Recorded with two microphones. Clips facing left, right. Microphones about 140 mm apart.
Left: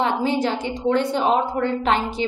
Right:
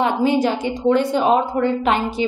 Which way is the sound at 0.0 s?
10° right (ahead or behind).